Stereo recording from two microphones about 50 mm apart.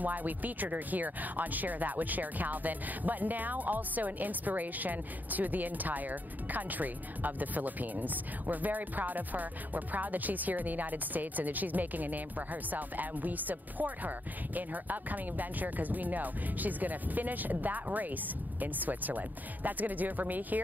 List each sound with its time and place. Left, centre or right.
0.0 s speech: right